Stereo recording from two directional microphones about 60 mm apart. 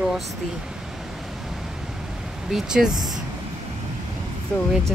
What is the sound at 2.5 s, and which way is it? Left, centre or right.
Speech, centre.